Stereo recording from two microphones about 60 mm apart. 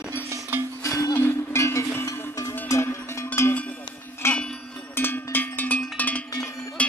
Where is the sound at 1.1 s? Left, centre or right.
Left.